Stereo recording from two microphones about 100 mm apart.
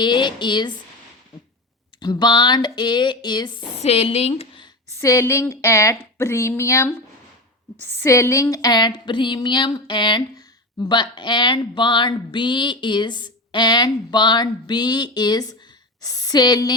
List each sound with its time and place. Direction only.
0.0 s speech: 50° left (ahead or behind)
2.0 s speech: 45° left (ahead or behind)
3.8 s a woman's voice: 85° left
4.9 s a woman's voice: 30° left (ahead or behind)